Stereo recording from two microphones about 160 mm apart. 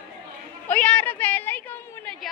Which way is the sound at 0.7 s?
10° left (ahead or behind).